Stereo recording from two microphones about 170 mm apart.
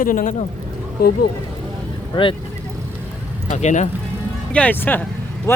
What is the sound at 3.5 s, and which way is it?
Speech, 45° left (ahead or behind).